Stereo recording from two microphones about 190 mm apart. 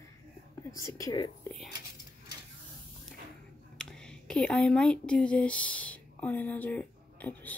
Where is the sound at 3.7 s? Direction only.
5° left (ahead or behind).